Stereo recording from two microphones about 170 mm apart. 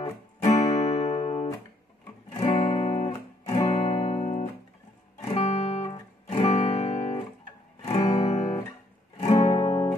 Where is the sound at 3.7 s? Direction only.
35° left (ahead or behind).